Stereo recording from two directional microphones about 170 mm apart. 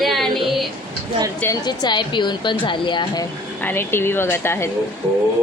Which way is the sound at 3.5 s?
10° left (ahead or behind).